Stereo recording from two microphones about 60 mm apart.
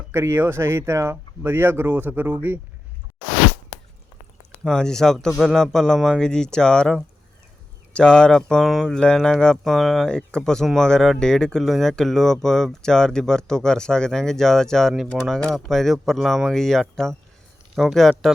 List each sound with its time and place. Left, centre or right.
0.1 s speech: right
1.1 s speech: right
4.6 s speech: centre
5.3 s speech: centre
5.7 s speech: centre
9.2 s speech: centre
10.1 s speech: centre